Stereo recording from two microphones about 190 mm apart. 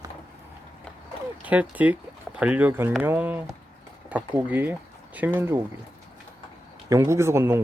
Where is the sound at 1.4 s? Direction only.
10° right (ahead or behind).